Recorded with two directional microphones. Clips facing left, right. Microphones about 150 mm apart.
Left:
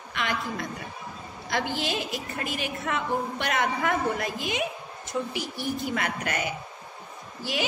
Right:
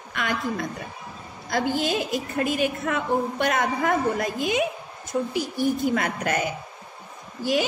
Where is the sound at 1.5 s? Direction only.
45° right (ahead or behind).